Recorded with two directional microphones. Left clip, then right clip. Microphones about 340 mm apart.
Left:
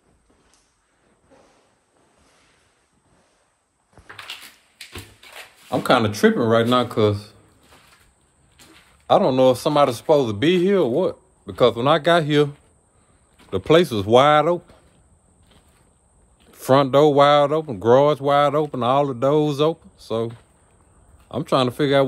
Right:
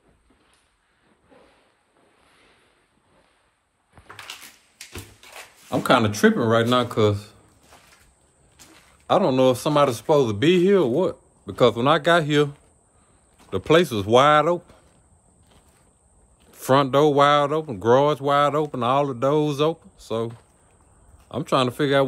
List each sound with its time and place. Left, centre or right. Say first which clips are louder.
4.9 s drawer open or close: left 1 dB; centre
7.0 s speech: left 1 dB; centre
9.0 s speech: left 3 dB; centre
13.7 s speech: left 2 dB; centre
16.6 s speech: left 3 dB; centre
21.3 s speech: left 2 dB; centre